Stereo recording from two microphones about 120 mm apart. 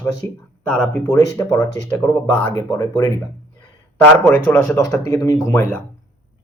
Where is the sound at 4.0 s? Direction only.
15° left (ahead or behind).